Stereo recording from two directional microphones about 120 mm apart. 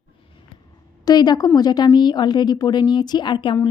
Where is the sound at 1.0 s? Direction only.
35° left (ahead or behind).